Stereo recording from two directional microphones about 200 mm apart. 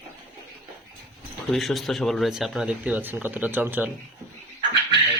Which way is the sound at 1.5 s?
Centre (ahead or behind).